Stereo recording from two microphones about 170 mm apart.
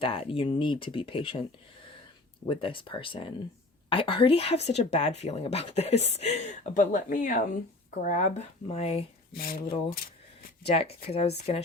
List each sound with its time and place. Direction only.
0.0 s speech: 35° left (ahead or behind)
2.5 s speech: 30° left (ahead or behind)
9.3 s speech: 60° left (ahead or behind)
10.7 s speech: 35° left (ahead or behind)